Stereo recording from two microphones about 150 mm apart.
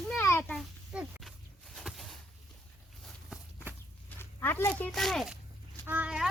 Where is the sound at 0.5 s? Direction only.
Centre (ahead or behind).